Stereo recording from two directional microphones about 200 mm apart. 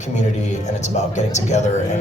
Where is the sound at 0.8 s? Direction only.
35° left (ahead or behind).